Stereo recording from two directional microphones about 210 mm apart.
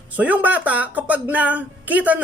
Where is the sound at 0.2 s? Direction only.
5° right (ahead or behind).